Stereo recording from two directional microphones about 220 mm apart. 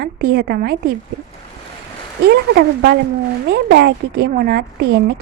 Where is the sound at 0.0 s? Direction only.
45° right (ahead or behind).